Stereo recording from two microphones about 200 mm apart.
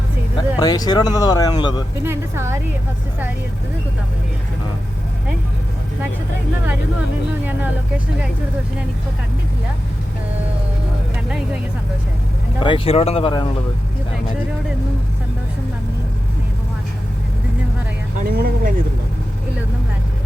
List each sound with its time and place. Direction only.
0.6 s speech: 20° left (ahead or behind)
2.0 s speech: 15° right (ahead or behind)
7.4 s speech: 10° right (ahead or behind)
12.5 s speech: 25° left (ahead or behind)
18.2 s speech: 50° right (ahead or behind)